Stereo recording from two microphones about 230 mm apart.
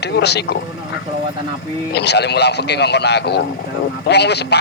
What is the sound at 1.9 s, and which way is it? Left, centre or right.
Speech, left.